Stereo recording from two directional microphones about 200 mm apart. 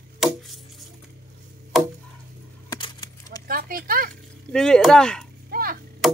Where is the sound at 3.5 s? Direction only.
45° right (ahead or behind).